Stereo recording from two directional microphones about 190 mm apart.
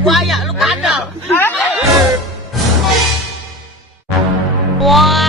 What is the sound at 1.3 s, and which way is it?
Speech, 10° left (ahead or behind).